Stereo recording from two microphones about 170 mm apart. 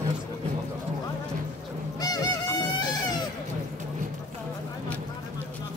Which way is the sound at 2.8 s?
25° left (ahead or behind).